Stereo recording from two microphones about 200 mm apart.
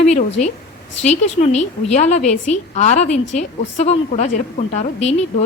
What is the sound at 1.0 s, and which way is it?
A woman's voice, 35° left (ahead or behind).